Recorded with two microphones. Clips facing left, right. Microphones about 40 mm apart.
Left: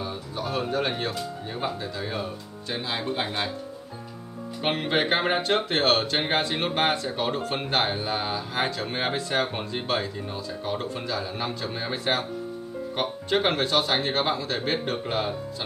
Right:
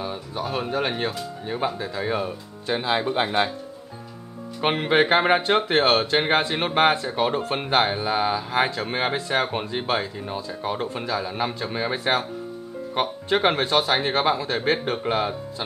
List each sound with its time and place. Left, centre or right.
0.0 s speech: centre
4.6 s speech: centre